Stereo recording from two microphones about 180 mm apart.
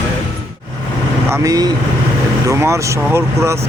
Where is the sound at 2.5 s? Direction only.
15° right (ahead or behind).